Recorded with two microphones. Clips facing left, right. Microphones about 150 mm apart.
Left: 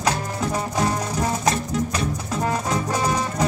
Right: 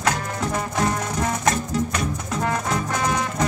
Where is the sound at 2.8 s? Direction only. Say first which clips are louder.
Left 1 dB; 30° left (ahead or behind).